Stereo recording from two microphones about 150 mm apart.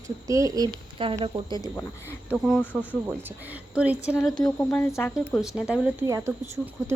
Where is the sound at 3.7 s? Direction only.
5° right (ahead or behind).